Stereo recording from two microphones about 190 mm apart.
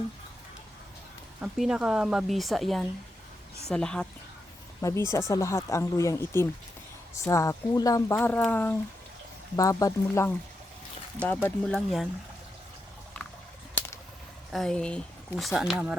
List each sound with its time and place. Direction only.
1.4 s speech: 5° right (ahead or behind)
4.8 s speech: 15° left (ahead or behind)
13.7 s a sound: 10° left (ahead or behind)
14.5 s speech: centre (ahead or behind)